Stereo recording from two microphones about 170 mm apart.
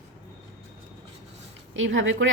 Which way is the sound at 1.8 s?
90° right.